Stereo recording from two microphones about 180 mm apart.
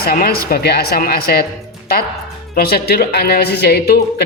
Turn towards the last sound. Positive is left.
turn(degrees=60)  # may be behind; listen again after turning